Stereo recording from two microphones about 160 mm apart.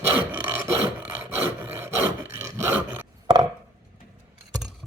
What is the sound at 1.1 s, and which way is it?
Wood, 10° right (ahead or behind).